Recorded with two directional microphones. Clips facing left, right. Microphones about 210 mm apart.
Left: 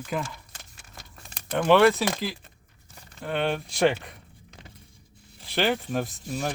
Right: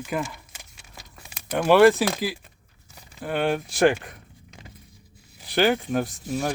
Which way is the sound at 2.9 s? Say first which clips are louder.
Right 2 dB; 5° right (ahead or behind).